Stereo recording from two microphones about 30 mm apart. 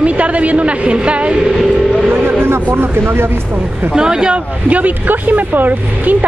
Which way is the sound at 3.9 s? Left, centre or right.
Right.